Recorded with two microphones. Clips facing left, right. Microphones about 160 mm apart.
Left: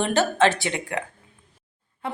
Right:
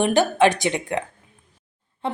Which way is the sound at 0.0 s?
15° right (ahead or behind).